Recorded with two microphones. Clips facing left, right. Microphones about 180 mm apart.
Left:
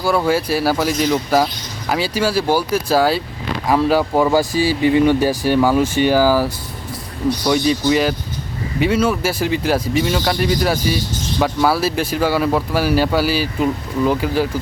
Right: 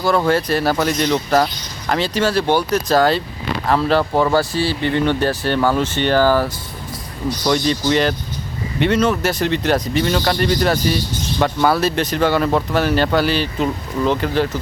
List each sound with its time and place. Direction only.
0.0 s speech: 5° left (ahead or behind)